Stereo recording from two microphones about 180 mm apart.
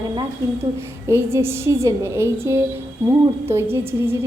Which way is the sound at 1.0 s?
15° right (ahead or behind).